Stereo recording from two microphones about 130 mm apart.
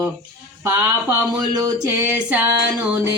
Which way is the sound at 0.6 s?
20° right (ahead or behind).